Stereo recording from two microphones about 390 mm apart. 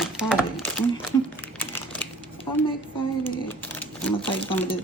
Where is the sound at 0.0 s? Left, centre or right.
Centre.